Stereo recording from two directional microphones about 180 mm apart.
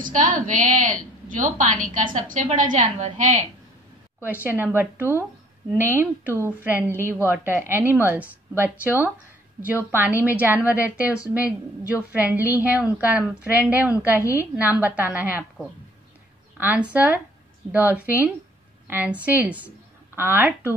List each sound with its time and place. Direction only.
0.0 s a woman's voice: 45° right (ahead or behind)
4.2 s a woman's voice: 10° right (ahead or behind)
16.5 s a woman's voice: 10° right (ahead or behind)